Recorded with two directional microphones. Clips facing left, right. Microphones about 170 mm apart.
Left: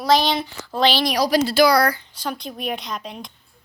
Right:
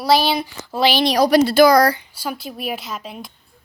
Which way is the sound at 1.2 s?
55° right (ahead or behind).